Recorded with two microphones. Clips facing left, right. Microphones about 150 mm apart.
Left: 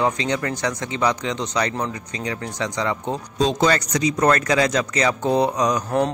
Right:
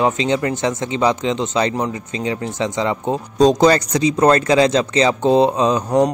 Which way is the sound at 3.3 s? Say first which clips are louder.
Right 7 dB; 40° right (ahead or behind).